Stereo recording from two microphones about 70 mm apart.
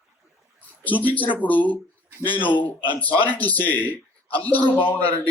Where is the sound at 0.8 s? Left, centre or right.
Left.